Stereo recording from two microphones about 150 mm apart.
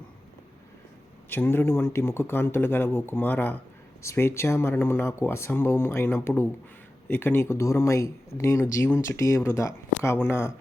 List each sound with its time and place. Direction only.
1.3 s speech: 15° left (ahead or behind)